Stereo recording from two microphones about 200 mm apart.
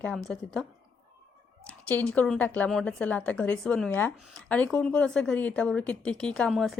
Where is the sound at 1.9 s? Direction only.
10° left (ahead or behind).